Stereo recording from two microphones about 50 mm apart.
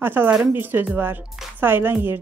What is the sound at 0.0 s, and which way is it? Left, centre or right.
Speech, right.